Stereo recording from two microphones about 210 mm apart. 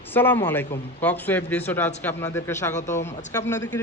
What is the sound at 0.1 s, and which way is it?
Speech, 10° left (ahead or behind).